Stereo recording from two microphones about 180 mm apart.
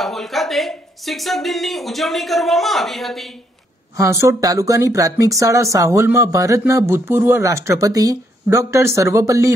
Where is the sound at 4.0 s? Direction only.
15° right (ahead or behind).